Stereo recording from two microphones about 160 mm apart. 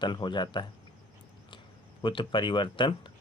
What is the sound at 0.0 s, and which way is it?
Speech, 30° left (ahead or behind).